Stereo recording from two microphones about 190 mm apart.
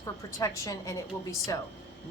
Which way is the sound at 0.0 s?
15° left (ahead or behind).